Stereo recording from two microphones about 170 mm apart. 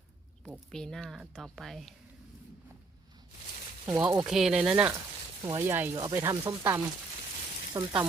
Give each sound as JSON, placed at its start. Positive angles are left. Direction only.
{"t": 0.7, "sound": "speech", "side_deg": 5}
{"t": 3.8, "sound": "speech", "side_deg": -15}
{"t": 4.3, "sound": "speech", "side_deg": 0}